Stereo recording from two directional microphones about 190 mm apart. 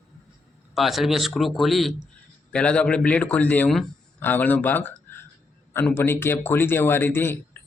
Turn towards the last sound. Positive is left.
turn(degrees=10)  # may be behind; listen again after turning